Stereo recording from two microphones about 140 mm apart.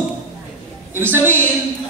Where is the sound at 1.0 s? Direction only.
15° right (ahead or behind).